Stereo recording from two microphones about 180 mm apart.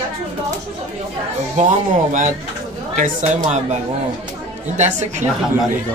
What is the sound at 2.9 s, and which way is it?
Speech, 45° right (ahead or behind).